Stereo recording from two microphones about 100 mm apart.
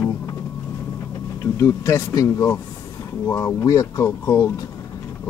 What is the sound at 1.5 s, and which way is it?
Speech, 30° left (ahead or behind).